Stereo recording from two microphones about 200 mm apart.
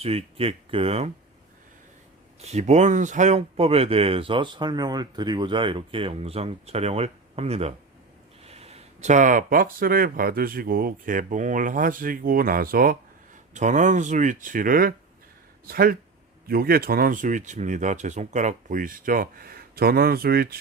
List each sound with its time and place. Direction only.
0.0 s speech: 30° right (ahead or behind)
2.4 s speech: 35° right (ahead or behind); by 20.6 s 50° right (ahead or behind)